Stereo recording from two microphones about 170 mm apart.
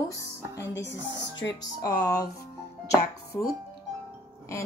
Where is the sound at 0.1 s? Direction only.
20° left (ahead or behind).